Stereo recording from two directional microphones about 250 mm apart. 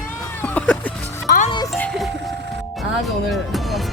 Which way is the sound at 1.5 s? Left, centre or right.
Centre.